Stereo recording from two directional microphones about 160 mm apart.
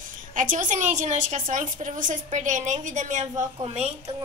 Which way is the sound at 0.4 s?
55° right (ahead or behind).